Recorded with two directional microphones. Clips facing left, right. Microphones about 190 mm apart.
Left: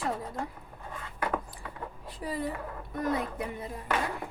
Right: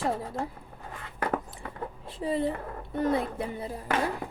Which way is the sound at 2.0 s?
25° right (ahead or behind).